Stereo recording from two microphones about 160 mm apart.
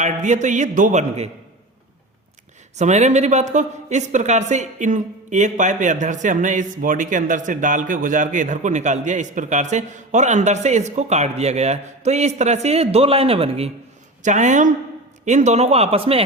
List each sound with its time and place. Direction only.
0.0 s speech: 50° right (ahead or behind)
2.7 s speech: 45° right (ahead or behind)
14.2 s speech: 50° right (ahead or behind)